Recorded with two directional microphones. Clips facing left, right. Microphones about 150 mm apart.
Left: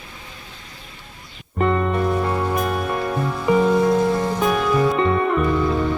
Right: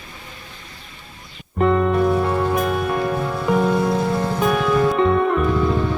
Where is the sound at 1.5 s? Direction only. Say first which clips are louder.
Right 3 dB; centre (ahead or behind).